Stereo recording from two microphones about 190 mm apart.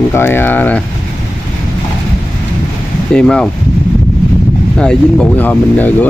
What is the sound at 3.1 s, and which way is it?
Speech, 5° left (ahead or behind).